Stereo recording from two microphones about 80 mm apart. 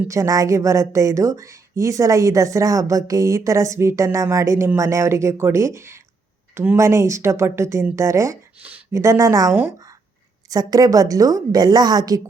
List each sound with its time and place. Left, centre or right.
0.1 s a woman's voice: right
10.5 s a woman's voice: right